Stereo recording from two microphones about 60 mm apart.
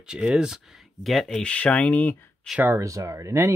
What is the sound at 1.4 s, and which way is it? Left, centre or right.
Speech, centre.